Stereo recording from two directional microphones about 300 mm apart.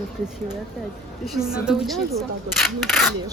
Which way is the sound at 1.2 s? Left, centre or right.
Centre.